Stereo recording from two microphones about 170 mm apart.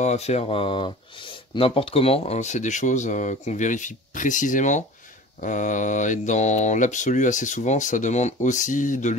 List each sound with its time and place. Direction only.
0.0 s speech: 40° left (ahead or behind)